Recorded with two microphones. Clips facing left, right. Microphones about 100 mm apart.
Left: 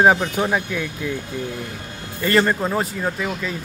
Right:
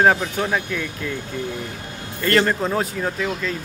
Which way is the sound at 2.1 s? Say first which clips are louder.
Left 1 dB; 5° left (ahead or behind).